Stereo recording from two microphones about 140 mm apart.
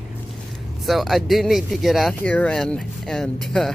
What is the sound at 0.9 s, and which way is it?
Speech, centre (ahead or behind).